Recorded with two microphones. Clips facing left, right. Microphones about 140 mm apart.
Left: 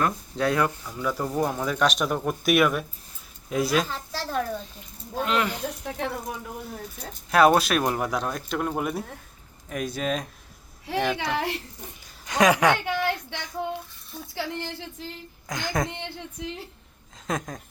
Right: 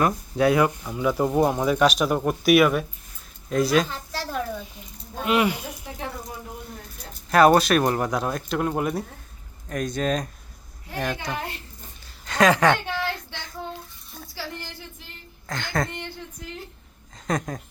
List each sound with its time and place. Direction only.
0.0 s speech: 10° right (ahead or behind)
1.6 s speech: 10° right (ahead or behind)
7.3 s speech: centre (ahead or behind)
10.9 s a child's voice: 90° left
12.2 s a sound: 15° left (ahead or behind)
14.3 s a woman's voice: 20° left (ahead or behind)
17.2 s speech: centre (ahead or behind)